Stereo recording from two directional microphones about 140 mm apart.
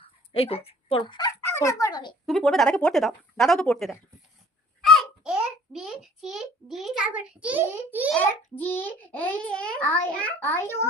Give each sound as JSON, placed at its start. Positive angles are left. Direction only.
{"t": 0.3, "sound": "speech", "side_deg": 45}
{"t": 1.5, "sound": "speech", "side_deg": 20}
{"t": 2.2, "sound": "speech", "side_deg": 0}
{"t": 4.9, "sound": "a child's voice", "side_deg": -5}
{"t": 8.2, "sound": "a child's voice", "side_deg": 15}